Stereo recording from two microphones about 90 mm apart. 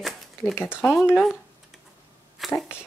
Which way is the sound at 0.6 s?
20° left (ahead or behind).